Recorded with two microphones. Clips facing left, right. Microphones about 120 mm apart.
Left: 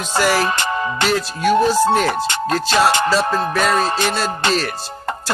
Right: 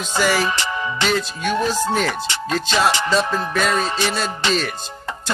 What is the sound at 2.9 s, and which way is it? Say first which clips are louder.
Speech: left 3 dB; 50° left (ahead or behind).